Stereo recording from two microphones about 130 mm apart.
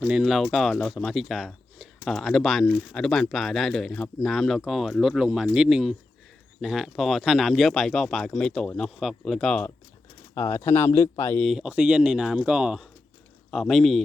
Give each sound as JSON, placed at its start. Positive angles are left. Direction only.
{"t": 0.1, "sound": "speech", "side_deg": -5}
{"t": 10.5, "sound": "speech", "side_deg": 20}
{"t": 11.4, "sound": "speech", "side_deg": -5}